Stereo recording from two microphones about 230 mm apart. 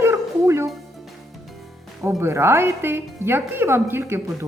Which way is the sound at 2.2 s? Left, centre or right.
Centre.